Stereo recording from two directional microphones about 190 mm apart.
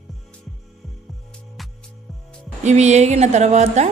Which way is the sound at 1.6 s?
Centre (ahead or behind).